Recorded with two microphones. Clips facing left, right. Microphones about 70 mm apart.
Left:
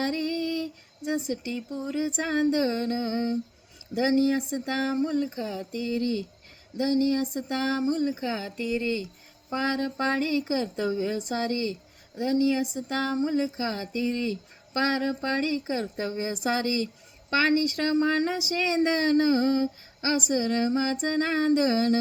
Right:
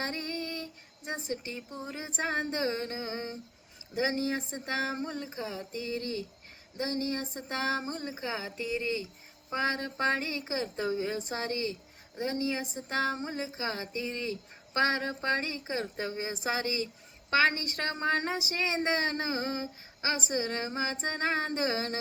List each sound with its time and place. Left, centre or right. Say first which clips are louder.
0.0 s a sound: left 8 dB; right
3.9 s speech: left 7 dB; right
17.3 s speech: left 4 dB; right